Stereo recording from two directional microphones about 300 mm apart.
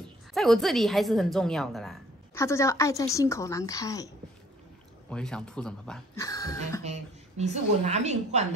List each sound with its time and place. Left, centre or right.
0.3 s a woman's voice: centre
5.1 s speech: centre
6.8 s a woman's voice: right